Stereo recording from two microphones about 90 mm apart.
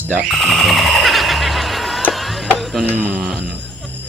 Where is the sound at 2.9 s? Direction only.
20° right (ahead or behind).